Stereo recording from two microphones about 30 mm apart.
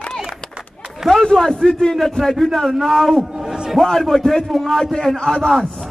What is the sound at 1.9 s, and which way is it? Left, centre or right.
A man's voice, centre.